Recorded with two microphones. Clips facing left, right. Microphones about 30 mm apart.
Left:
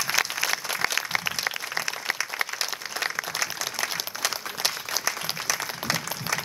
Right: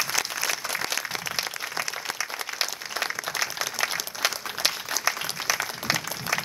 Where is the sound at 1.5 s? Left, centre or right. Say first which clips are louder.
Left 1 dB; centre.